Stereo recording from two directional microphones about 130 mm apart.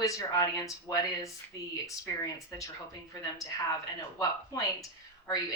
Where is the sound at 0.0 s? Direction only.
25° left (ahead or behind).